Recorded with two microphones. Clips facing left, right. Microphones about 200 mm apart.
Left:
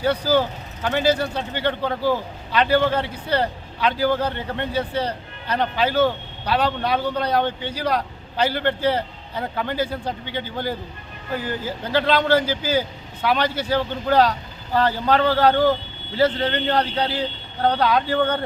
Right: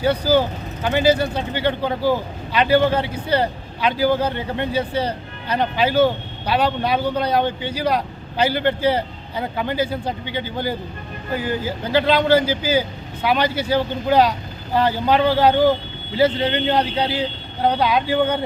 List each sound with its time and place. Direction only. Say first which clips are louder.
0.0 s speech: right 2 dB; centre (ahead or behind)